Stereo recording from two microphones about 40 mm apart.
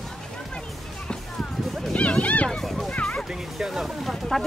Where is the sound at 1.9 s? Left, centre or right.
Left.